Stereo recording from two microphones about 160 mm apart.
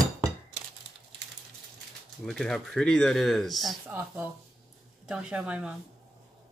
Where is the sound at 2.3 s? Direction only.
5° left (ahead or behind).